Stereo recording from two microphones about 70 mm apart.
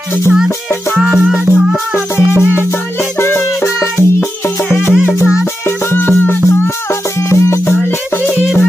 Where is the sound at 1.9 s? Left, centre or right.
Left.